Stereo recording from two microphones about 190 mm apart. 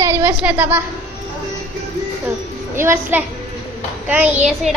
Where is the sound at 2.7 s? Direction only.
10° right (ahead or behind).